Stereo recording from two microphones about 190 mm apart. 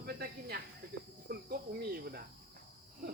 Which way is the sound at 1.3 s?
55° right (ahead or behind).